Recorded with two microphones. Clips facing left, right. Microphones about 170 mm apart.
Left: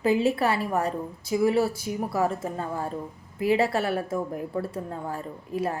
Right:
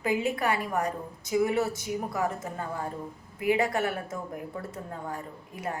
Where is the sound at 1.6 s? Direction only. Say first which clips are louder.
Left 3 dB; 20° right (ahead or behind).